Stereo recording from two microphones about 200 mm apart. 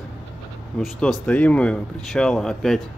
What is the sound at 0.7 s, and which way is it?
Speech, 5° left (ahead or behind).